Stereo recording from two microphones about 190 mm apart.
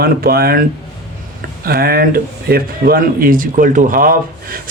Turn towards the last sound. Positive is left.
turn(degrees=-50)  # may be behind; listen again after turning